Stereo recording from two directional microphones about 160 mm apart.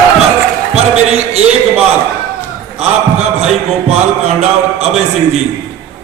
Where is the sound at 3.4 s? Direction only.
40° right (ahead or behind).